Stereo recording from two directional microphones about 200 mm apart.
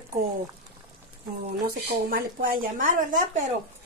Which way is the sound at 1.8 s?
45° right (ahead or behind).